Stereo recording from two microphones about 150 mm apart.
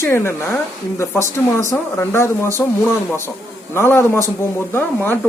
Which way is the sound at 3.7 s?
15° left (ahead or behind).